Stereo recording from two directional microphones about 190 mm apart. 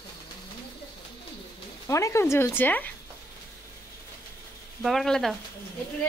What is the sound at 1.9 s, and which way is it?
Speech, 15° left (ahead or behind).